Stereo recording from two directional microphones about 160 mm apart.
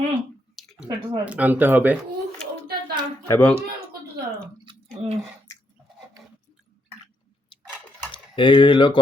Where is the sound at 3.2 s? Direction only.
10° left (ahead or behind).